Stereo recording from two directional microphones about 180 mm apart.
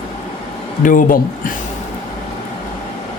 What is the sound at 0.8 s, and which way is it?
Speech, 45° left (ahead or behind).